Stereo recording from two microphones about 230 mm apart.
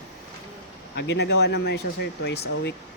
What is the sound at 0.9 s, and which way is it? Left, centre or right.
Speech, left.